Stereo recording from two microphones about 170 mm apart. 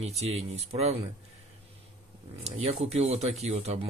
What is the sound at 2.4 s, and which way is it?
Speech, 40° right (ahead or behind).